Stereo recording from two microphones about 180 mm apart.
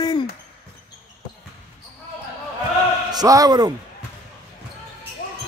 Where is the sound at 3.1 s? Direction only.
20° right (ahead or behind).